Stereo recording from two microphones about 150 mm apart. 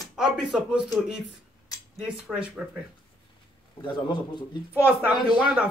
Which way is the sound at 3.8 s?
30° left (ahead or behind).